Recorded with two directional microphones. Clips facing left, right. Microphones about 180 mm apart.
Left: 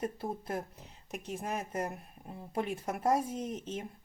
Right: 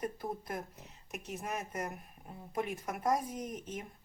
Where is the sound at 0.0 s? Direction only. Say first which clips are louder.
Left 2 dB; 30° left (ahead or behind).